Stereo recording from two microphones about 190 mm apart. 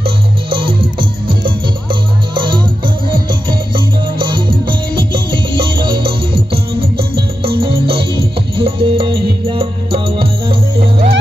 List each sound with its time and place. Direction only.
0.0 s music: 25° right (ahead or behind)